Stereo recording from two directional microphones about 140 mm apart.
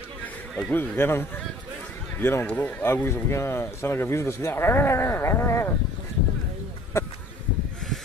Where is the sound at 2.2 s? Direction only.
15° left (ahead or behind).